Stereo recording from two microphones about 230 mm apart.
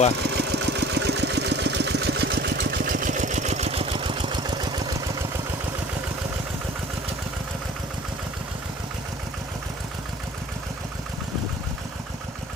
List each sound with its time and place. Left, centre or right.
0.2 s engine: right; by 5.0 s centre